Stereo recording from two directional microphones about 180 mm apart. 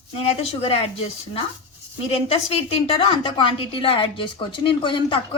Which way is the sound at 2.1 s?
35° left (ahead or behind).